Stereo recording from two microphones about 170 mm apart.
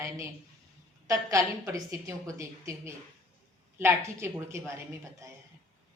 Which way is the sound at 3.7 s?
15° right (ahead or behind).